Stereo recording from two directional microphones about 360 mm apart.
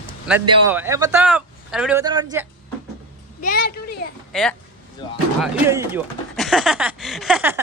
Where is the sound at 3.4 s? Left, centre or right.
Left.